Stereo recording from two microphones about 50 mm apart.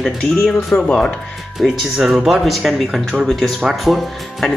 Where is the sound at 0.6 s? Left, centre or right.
Left.